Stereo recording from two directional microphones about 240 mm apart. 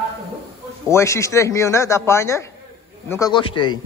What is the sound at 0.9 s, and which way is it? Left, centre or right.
A man's voice, centre.